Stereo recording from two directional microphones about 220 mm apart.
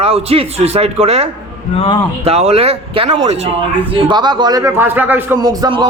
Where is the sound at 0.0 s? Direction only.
25° right (ahead or behind).